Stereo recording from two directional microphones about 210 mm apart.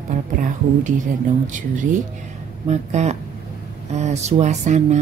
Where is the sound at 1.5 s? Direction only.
35° right (ahead or behind).